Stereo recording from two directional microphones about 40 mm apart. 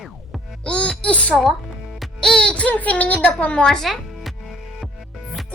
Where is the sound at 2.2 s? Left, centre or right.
Left.